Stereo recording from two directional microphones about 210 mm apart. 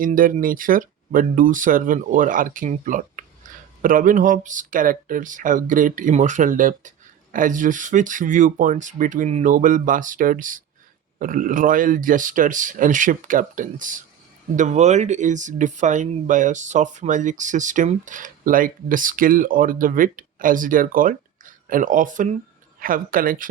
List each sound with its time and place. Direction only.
0.0 s speech: 40° right (ahead or behind)